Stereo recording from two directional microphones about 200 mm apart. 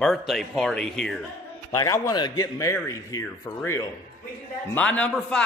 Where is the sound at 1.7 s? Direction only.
15° left (ahead or behind).